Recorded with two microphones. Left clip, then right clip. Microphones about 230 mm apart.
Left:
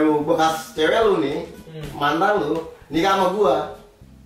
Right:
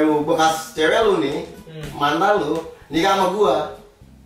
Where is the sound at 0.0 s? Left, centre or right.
Centre.